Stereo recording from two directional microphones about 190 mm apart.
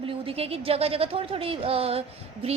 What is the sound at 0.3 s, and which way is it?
A woman's voice, 30° right (ahead or behind).